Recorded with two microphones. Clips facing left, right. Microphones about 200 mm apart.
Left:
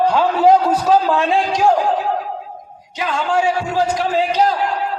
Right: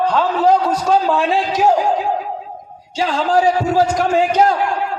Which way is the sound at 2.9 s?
30° right (ahead or behind).